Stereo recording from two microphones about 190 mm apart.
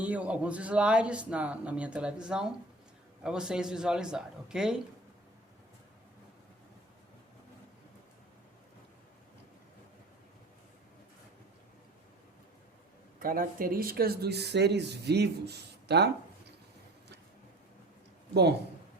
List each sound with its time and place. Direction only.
0.0 s a man's voice: 5° right (ahead or behind)
13.1 s speech: 45° right (ahead or behind)